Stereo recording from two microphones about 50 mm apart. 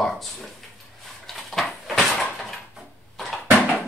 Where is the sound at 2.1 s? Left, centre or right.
Centre.